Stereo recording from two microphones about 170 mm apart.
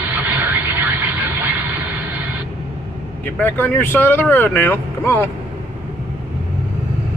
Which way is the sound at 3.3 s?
10° left (ahead or behind).